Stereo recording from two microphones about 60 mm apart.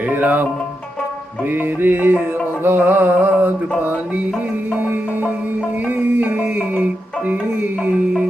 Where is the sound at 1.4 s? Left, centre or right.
Right.